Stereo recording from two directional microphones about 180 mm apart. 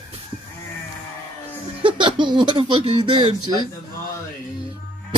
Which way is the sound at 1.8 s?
25° right (ahead or behind).